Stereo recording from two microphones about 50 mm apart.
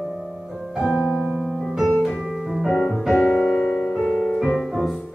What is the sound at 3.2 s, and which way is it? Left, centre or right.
Music, left.